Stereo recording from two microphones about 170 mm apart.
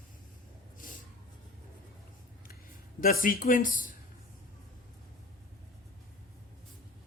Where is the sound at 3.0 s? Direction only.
55° left (ahead or behind).